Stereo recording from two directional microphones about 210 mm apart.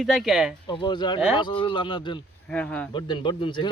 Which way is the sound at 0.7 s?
20° left (ahead or behind).